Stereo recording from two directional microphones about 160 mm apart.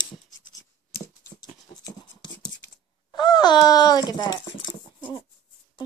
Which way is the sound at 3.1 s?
25° left (ahead or behind).